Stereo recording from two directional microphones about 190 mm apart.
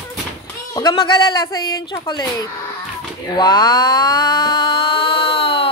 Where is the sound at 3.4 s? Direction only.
20° left (ahead or behind).